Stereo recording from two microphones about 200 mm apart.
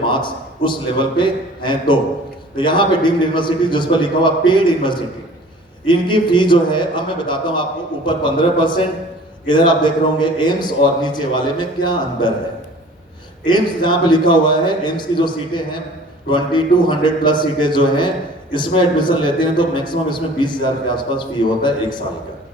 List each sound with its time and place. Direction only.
0.0 s a man's voice: 25° left (ahead or behind)
13.4 s a man's voice: 25° left (ahead or behind)